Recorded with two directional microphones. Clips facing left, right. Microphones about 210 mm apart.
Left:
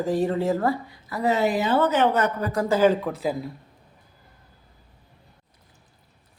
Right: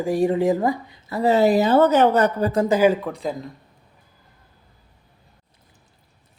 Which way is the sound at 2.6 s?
15° right (ahead or behind).